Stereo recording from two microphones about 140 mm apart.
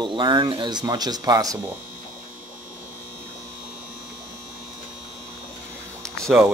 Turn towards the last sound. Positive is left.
turn(degrees=5)  # may be behind; listen again after turning